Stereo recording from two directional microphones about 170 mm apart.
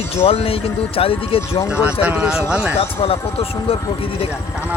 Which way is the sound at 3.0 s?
35° left (ahead or behind).